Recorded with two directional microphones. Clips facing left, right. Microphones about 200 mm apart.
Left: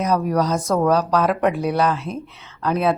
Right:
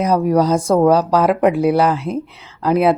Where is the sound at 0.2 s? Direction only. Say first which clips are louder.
Right 6 dB; 25° right (ahead or behind).